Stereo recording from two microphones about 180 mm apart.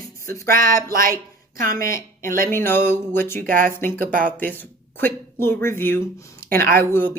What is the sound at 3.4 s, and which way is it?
Speech, 50° right (ahead or behind).